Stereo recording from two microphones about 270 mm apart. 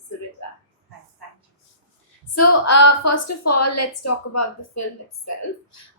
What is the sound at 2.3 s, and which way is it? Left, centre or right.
A woman's voice, left.